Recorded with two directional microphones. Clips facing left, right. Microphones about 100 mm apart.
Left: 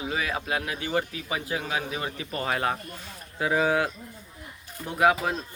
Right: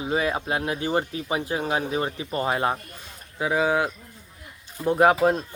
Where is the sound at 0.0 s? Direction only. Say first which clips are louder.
Right 5 dB; 30° right (ahead or behind).